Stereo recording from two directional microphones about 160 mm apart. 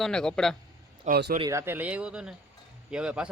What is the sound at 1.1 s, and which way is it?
Speech, 90° right.